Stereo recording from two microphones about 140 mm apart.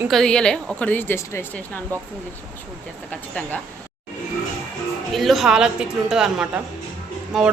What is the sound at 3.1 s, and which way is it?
Speech, 10° left (ahead or behind).